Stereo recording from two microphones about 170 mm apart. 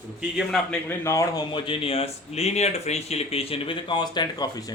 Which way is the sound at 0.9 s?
15° left (ahead or behind).